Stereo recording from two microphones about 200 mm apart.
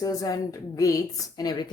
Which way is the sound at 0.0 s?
15° left (ahead or behind).